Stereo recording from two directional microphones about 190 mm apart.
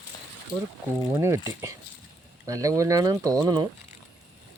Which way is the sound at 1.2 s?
15° right (ahead or behind).